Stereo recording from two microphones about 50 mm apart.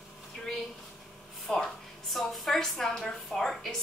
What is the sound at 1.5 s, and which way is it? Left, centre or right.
A woman's voice, centre.